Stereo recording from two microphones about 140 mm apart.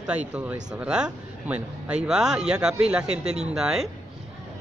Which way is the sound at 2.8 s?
5° right (ahead or behind).